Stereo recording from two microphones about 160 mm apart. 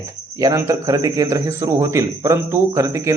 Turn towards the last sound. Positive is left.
turn(degrees=-20)  # may be behind; listen again after turning